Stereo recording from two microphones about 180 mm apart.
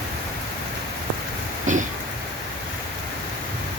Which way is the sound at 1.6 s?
45° right (ahead or behind).